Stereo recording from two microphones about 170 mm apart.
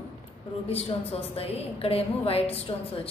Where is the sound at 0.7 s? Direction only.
35° left (ahead or behind).